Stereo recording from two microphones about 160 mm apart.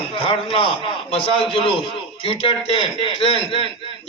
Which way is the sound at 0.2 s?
35° left (ahead or behind).